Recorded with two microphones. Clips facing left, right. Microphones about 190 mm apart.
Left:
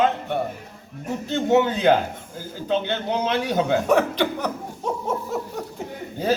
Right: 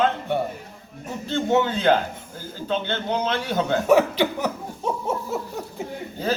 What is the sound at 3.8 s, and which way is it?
Speech, 5° right (ahead or behind).